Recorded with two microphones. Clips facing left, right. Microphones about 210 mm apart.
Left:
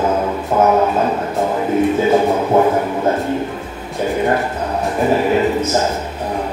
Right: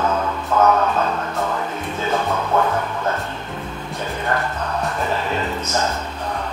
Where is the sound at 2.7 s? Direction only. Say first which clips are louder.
Left 6 dB; 25° left (ahead or behind).